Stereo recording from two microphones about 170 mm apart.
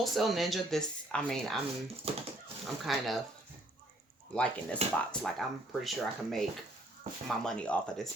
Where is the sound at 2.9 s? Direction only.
Centre (ahead or behind).